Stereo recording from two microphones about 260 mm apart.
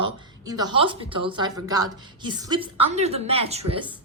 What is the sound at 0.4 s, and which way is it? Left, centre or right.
A woman's voice, centre.